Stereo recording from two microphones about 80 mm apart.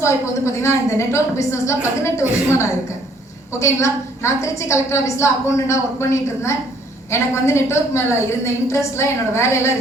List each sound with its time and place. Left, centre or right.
0.0 s a woman's voice: left